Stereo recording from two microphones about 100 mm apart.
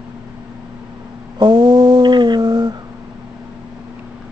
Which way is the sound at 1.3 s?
50° right (ahead or behind).